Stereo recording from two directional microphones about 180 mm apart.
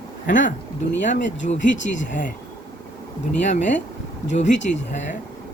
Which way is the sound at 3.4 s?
40° left (ahead or behind).